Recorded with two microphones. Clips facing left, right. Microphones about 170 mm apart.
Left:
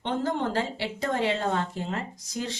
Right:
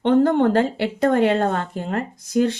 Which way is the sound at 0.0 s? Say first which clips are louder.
Right 12 dB; 60° right (ahead or behind).